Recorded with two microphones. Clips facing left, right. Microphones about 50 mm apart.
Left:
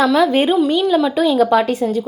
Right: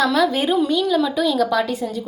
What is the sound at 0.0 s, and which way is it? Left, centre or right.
Speech, left.